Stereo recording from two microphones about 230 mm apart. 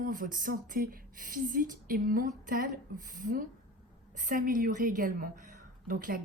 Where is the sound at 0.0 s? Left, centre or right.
Right.